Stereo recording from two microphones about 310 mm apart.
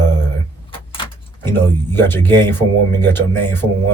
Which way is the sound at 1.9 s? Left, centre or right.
Centre.